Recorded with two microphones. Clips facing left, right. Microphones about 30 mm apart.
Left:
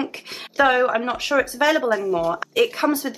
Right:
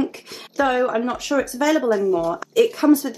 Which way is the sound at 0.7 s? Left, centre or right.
Left.